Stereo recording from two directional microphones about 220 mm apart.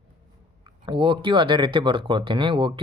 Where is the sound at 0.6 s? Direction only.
20° right (ahead or behind).